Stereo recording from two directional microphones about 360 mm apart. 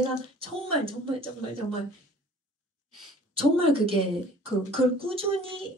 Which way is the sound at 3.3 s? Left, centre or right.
Centre.